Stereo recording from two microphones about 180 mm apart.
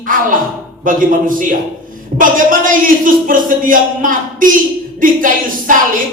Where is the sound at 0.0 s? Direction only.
50° right (ahead or behind).